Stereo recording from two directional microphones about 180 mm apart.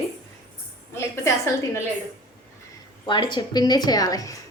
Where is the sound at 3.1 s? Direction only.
25° left (ahead or behind).